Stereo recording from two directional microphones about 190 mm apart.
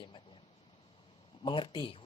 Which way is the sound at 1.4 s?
25° left (ahead or behind).